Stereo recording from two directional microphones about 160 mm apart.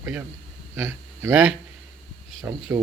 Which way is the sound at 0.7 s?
15° right (ahead or behind).